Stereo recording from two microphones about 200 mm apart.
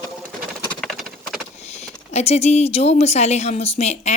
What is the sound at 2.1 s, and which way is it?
A woman's voice, 30° left (ahead or behind).